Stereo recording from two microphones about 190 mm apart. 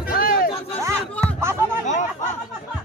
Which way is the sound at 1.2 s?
15° right (ahead or behind).